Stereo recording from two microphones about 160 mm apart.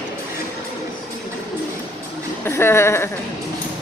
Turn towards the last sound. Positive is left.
turn(degrees=15)  # may be behind; listen again after turning